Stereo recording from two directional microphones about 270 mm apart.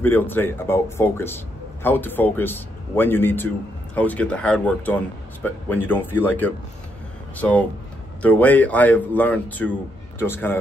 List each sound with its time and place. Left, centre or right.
0.0 s a man's voice: centre